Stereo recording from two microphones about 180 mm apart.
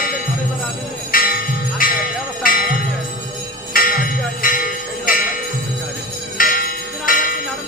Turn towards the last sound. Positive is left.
turn(degrees=50)  # may be behind; listen again after turning